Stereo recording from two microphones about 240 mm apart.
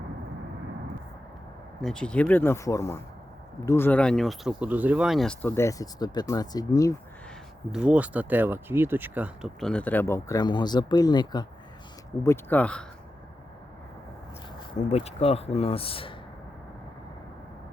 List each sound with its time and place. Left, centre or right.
1.8 s speech: centre
7.7 s speech: centre
14.7 s speech: left